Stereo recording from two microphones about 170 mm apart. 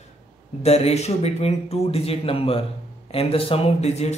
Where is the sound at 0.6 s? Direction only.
40° left (ahead or behind).